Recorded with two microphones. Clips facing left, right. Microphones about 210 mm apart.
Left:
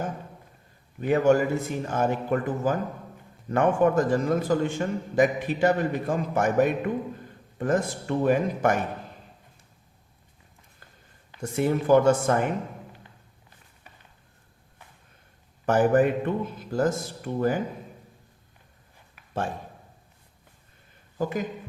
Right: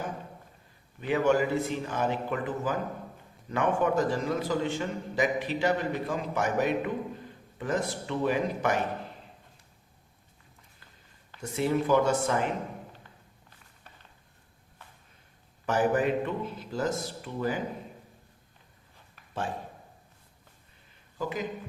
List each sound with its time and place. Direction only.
1.0 s a man's voice: 45° left (ahead or behind)
11.3 s a man's voice: 50° left (ahead or behind)
15.6 s a man's voice: 50° left (ahead or behind)
21.2 s speech: 50° left (ahead or behind)